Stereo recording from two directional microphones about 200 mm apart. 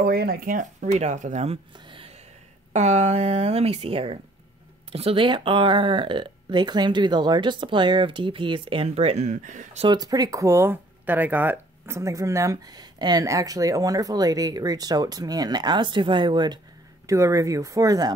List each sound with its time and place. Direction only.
0.0 s speech: 50° right (ahead or behind)
9.8 s speech: 20° right (ahead or behind)